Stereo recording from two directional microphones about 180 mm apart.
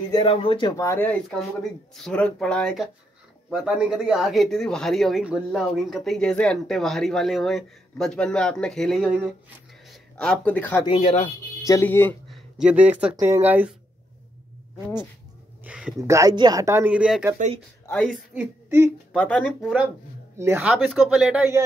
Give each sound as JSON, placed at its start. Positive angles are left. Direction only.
{"t": 0.1, "sound": "speech", "side_deg": 30}
{"t": 10.9, "sound": "speech", "side_deg": 35}
{"t": 11.6, "sound": "speech", "side_deg": 15}
{"t": 12.3, "sound": "speech", "side_deg": -5}
{"t": 15.6, "sound": "a sound", "side_deg": -5}
{"t": 16.0, "sound": "speech", "side_deg": -15}
{"t": 19.1, "sound": "speech", "side_deg": 5}
{"t": 20.3, "sound": "speech", "side_deg": -10}